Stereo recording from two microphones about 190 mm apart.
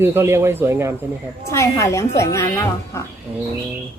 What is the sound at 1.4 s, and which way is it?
A woman's voice, 15° left (ahead or behind).